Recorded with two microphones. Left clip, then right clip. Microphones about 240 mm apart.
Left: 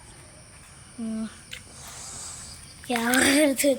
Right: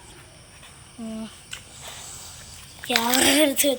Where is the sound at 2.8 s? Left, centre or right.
Centre.